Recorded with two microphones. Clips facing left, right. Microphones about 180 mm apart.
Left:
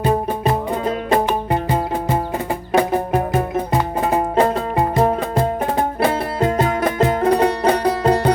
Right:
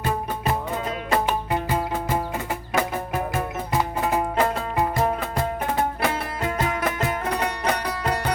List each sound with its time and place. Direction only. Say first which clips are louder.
2.7 s music: left 9 dB; 30° left (ahead or behind)